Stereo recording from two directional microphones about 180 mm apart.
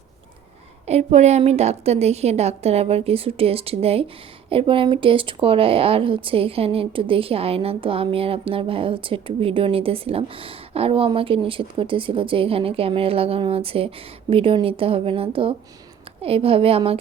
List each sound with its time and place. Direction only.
0.9 s speech: 40° right (ahead or behind)